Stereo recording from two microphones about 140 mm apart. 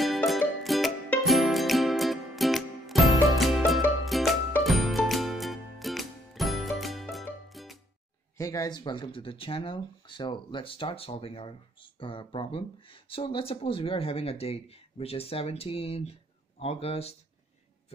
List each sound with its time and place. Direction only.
0.0 s music: centre (ahead or behind)
8.4 s speech: 25° left (ahead or behind); by 17.1 s 45° left (ahead or behind)